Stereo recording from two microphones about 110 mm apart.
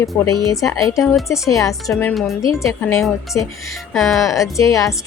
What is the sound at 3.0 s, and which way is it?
Speech, centre (ahead or behind).